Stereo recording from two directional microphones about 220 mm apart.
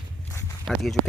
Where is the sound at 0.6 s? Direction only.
Centre (ahead or behind).